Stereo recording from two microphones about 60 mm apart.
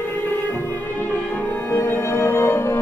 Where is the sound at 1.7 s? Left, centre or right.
Left.